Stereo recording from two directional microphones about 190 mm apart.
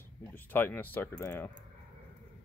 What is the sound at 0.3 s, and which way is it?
Speech, 10° left (ahead or behind).